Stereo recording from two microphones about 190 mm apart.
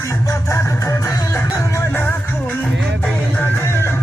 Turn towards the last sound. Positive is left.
turn(degrees=10)  # may be behind; listen again after turning